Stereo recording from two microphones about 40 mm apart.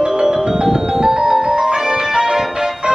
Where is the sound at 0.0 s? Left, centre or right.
Centre.